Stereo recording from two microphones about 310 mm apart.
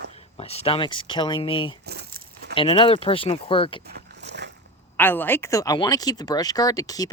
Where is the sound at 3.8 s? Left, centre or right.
Right.